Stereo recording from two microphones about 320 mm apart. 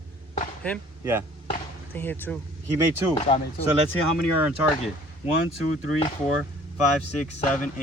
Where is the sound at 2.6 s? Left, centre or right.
Centre.